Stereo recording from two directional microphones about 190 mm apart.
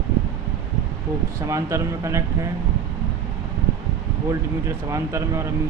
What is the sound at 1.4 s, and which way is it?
Speech, 15° right (ahead or behind).